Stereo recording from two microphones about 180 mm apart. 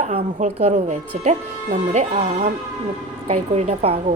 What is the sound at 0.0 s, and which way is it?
Speech, 35° right (ahead or behind).